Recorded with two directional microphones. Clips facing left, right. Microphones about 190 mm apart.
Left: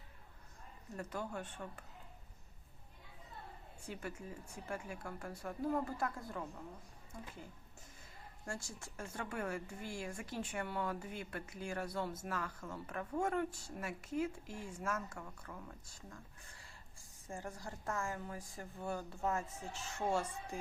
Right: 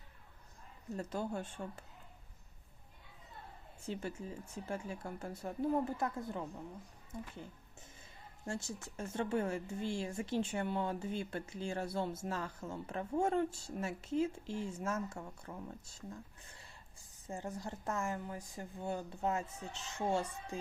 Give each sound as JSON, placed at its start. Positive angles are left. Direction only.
{"t": 0.9, "sound": "speech", "side_deg": -25}
{"t": 3.9, "sound": "speech", "side_deg": -30}
{"t": 8.4, "sound": "speech", "side_deg": -20}